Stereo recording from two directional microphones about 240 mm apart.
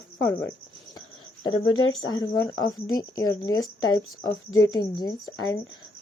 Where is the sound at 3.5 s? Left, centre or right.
Left.